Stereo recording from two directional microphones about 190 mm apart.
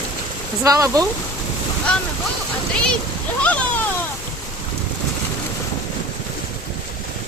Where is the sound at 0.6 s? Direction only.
15° right (ahead or behind).